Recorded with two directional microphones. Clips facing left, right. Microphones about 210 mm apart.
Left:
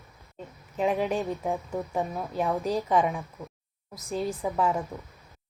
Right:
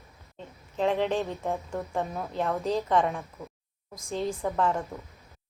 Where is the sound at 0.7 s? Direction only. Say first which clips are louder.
Even; 10° left (ahead or behind).